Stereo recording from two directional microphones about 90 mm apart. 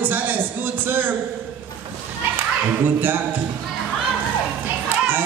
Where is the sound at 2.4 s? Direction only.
20° right (ahead or behind).